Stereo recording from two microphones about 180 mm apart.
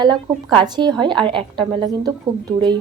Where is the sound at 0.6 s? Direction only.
25° right (ahead or behind).